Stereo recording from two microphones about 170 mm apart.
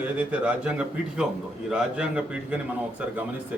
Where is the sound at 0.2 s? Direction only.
10° right (ahead or behind).